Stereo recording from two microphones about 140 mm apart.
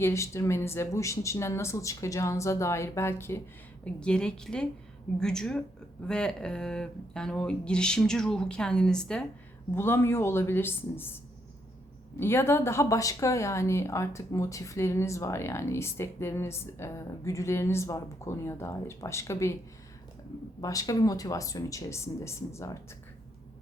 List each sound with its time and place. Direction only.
0.0 s speech: 20° left (ahead or behind)
3.8 s a woman's voice: 5° left (ahead or behind)
9.7 s a woman's voice: 15° left (ahead or behind)
12.2 s speech: 15° left (ahead or behind)
20.6 s speech: 25° left (ahead or behind)